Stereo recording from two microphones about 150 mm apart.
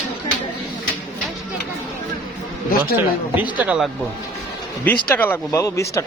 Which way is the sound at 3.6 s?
10° right (ahead or behind).